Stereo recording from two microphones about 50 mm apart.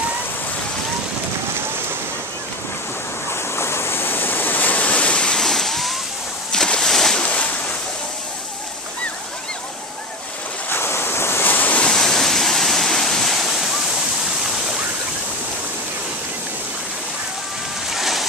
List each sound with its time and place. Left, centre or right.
3.3 s waves: left
5.4 s a sound: centre
7.2 s waves: left
10.7 s waves: left
11.4 s waves: left
11.9 s waves: centre
17.9 s boat: centre